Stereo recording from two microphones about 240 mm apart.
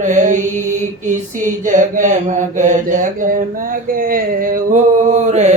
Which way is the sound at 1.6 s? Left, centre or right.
Right.